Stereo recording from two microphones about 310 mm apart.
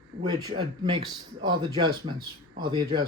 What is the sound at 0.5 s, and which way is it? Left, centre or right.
Speech, centre.